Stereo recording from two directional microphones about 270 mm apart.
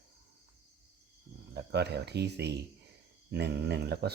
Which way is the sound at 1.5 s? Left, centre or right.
Right.